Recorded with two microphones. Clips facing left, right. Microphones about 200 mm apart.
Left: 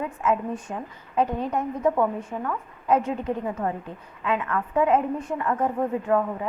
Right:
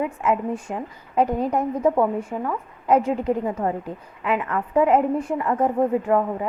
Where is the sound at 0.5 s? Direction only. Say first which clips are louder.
Right 3 dB; 35° right (ahead or behind).